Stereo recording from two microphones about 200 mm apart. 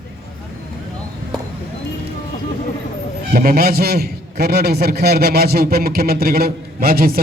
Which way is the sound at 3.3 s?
45° right (ahead or behind).